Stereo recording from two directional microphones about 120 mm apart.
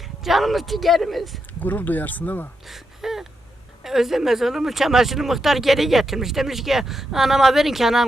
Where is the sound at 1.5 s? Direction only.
15° left (ahead or behind).